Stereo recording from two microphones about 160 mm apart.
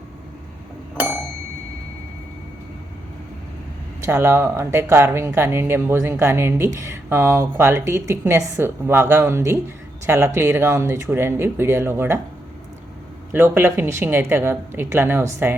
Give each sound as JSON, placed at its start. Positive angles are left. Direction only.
{"t": 4.0, "sound": "speech", "side_deg": -20}
{"t": 13.3, "sound": "speech", "side_deg": -15}